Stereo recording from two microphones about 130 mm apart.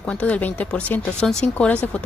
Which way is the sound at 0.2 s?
10° left (ahead or behind).